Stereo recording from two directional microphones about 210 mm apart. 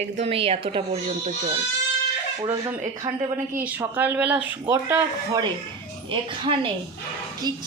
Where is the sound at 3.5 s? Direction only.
10° right (ahead or behind).